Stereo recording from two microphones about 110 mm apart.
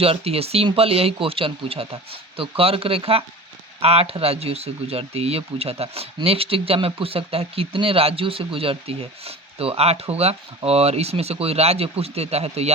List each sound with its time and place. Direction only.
0.0 s speech: 65° right (ahead or behind)